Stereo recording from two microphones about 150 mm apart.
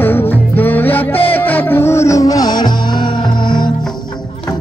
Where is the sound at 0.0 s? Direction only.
15° left (ahead or behind); by 3.7 s 30° left (ahead or behind).